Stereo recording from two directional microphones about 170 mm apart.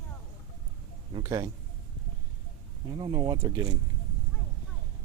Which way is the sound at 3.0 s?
25° right (ahead or behind).